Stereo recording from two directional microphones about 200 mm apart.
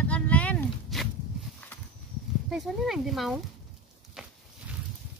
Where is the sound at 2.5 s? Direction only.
Centre (ahead or behind).